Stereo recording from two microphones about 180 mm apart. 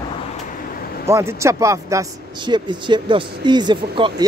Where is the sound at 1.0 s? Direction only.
15° right (ahead or behind).